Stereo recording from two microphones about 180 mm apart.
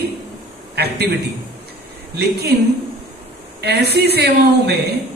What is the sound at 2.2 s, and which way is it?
Speech, 65° right (ahead or behind).